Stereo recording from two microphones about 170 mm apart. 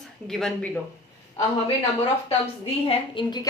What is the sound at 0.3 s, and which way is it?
Speech, 5° left (ahead or behind).